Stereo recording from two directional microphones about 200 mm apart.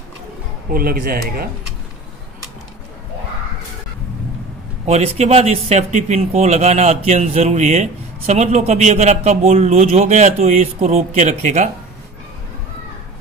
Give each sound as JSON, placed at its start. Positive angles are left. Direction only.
{"t": 0.7, "sound": "speech", "side_deg": -45}
{"t": 4.8, "sound": "speech", "side_deg": -30}